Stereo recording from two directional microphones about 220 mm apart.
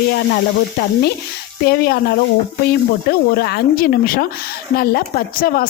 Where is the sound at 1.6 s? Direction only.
45° left (ahead or behind).